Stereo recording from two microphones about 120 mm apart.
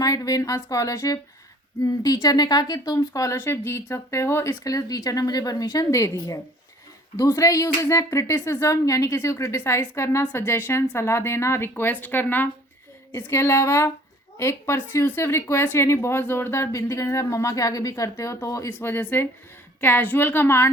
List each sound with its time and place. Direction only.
0.0 s a woman's voice: 30° left (ahead or behind)